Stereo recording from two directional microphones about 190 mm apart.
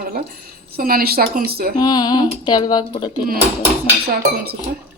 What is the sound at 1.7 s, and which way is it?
Speech, 20° left (ahead or behind).